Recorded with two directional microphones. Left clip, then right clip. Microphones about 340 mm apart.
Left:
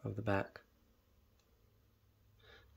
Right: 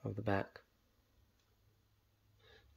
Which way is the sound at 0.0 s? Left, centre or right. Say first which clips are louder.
Left 1 dB; centre.